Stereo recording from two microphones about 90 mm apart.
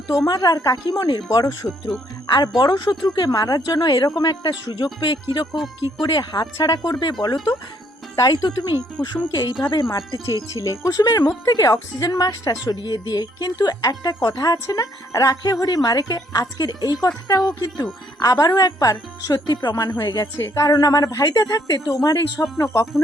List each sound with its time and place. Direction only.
0.3 s a woman's voice: 45° left (ahead or behind)
5.5 s speech: centre (ahead or behind)
6.0 s a woman's voice: 55° left (ahead or behind)
9.9 s a woman's voice: 35° left (ahead or behind)